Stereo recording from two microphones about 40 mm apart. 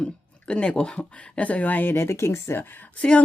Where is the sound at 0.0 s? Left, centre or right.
Left.